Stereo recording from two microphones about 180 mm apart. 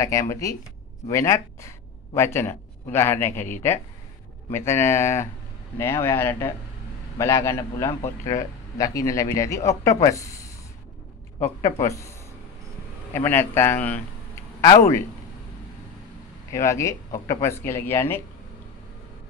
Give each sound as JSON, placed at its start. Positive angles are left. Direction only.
{"t": 0.0, "sound": "a man's voice", "side_deg": 15}
{"t": 4.5, "sound": "a man's voice", "side_deg": 15}
{"t": 11.8, "sound": "a man's voice", "side_deg": 15}
{"t": 13.1, "sound": "a man's voice", "side_deg": 10}
{"t": 16.5, "sound": "a man's voice", "side_deg": 15}